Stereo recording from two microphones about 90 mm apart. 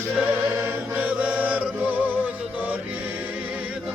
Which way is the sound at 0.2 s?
20° right (ahead or behind).